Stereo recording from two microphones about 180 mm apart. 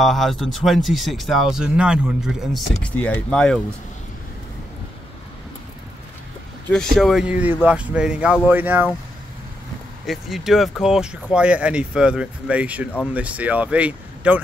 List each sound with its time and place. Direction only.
0.0 s speech: centre (ahead or behind)
6.7 s speech: centre (ahead or behind)
10.0 s speech: centre (ahead or behind)